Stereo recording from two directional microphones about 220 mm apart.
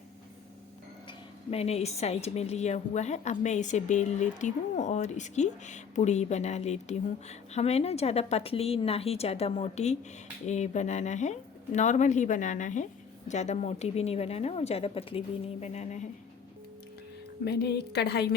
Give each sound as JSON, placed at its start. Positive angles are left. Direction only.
{"t": 1.0, "sound": "speech", "side_deg": 25}
{"t": 17.4, "sound": "a woman's voice", "side_deg": 45}